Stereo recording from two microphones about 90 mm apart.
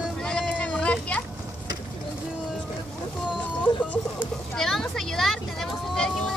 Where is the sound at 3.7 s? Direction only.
55° left (ahead or behind).